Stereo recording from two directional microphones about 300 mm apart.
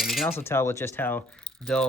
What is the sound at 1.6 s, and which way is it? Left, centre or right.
Speech, centre.